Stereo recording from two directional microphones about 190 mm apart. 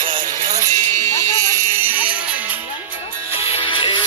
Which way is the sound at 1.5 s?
15° right (ahead or behind).